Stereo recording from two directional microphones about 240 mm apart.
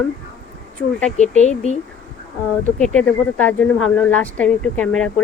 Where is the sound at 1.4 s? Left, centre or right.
Left.